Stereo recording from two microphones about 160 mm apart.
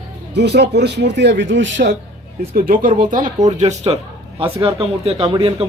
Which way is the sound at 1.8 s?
60° right (ahead or behind).